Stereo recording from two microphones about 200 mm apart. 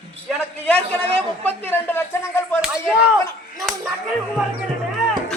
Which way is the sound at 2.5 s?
5° right (ahead or behind).